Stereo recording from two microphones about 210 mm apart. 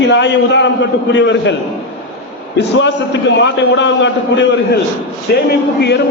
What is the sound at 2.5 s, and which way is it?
A man's voice, 60° left (ahead or behind).